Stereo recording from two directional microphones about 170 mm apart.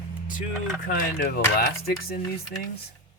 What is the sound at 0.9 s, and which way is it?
Speech, 55° left (ahead or behind).